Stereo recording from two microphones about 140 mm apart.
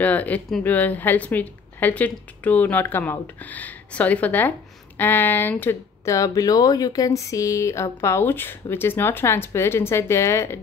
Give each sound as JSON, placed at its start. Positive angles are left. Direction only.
{"t": 0.0, "sound": "a woman's voice", "side_deg": 10}